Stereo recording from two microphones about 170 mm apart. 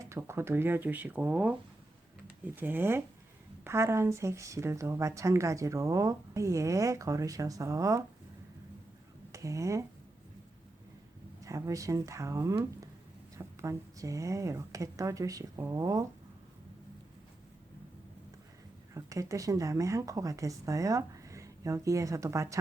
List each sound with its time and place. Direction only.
0.0 s speech: 15° right (ahead or behind)
9.3 s speech: 20° right (ahead or behind)
11.4 s speech: 20° right (ahead or behind)
18.9 s speech: 20° right (ahead or behind)